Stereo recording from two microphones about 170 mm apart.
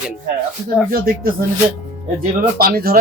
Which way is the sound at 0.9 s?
60° right (ahead or behind).